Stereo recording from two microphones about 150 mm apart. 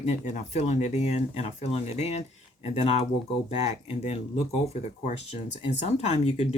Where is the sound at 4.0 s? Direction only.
45° left (ahead or behind).